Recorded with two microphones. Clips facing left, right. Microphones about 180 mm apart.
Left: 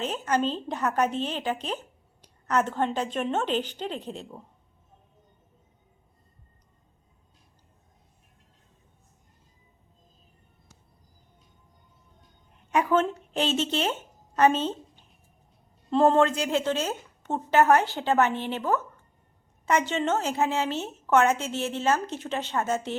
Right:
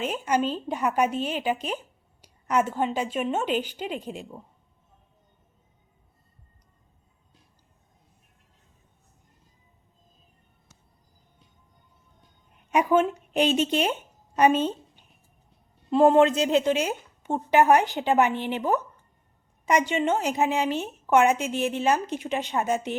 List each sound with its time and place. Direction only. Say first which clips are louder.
0.0 s a woman's voice: right 1 dB; 10° right (ahead or behind)
12.7 s a woman's voice: right 2 dB; 15° right (ahead or behind)